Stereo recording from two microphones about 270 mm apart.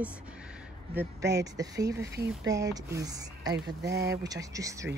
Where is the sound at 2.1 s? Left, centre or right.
Right.